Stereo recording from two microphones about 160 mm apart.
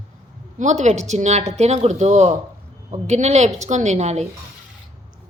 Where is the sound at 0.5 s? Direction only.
45° right (ahead or behind).